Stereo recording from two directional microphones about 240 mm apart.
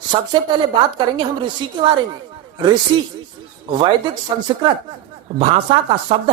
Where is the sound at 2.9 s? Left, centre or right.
Centre.